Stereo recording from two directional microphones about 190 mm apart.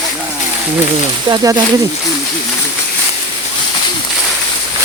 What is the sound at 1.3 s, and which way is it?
Speech, 25° right (ahead or behind).